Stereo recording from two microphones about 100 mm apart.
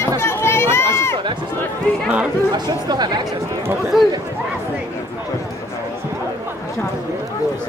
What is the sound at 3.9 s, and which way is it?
Speech, centre (ahead or behind).